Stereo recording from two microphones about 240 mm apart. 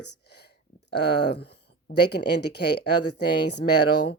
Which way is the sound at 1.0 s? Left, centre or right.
Left.